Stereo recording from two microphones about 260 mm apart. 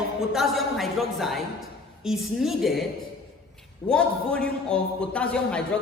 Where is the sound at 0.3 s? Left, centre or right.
Centre.